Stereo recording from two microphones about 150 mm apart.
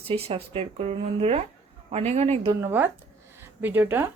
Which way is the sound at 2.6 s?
15° right (ahead or behind).